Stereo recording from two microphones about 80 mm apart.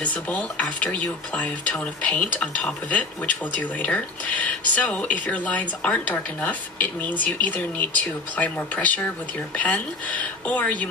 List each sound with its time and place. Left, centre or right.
0.0 s speech: centre